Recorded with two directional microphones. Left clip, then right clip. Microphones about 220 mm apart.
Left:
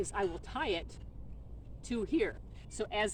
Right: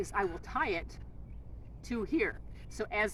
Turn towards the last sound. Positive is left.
turn(degrees=0)  # may be behind; listen again after turning